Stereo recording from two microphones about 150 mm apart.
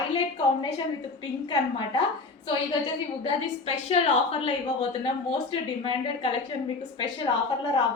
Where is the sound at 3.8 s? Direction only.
40° left (ahead or behind).